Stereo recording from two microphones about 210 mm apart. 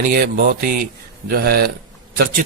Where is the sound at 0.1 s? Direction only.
45° right (ahead or behind).